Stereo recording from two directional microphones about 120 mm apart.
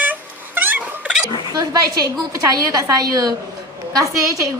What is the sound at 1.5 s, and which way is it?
A woman's voice, 35° right (ahead or behind).